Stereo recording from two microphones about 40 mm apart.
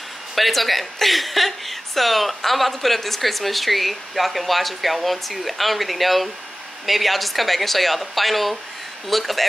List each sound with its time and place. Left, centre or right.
0.4 s speech: centre